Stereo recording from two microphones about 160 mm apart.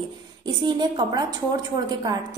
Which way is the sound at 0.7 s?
25° right (ahead or behind).